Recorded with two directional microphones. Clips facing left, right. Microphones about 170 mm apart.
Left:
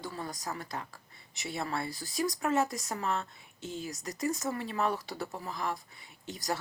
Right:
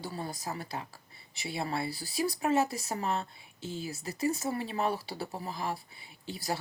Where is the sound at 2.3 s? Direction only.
25° right (ahead or behind).